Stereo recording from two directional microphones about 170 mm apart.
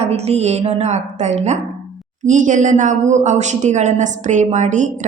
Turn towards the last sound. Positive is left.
turn(degrees=-45)  # may be behind; listen again after turning